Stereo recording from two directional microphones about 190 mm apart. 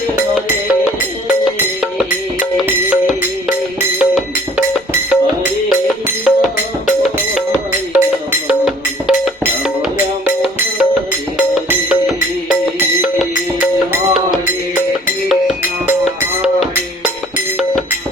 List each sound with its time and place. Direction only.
1.3 s music: 5° right (ahead or behind)
7.9 s music: 10° right (ahead or behind)